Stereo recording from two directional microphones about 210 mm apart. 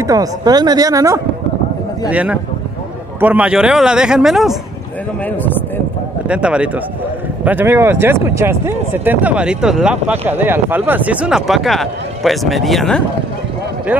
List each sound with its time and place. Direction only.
0.0 s speech: 15° right (ahead or behind); by 4.6 s centre (ahead or behind)
6.2 s speech: 5° right (ahead or behind)